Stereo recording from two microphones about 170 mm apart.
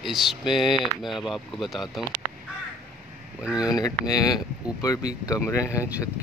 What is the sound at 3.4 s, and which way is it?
Speech, 5° right (ahead or behind).